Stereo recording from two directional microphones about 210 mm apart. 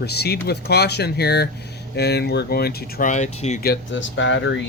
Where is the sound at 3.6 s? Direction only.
60° left (ahead or behind).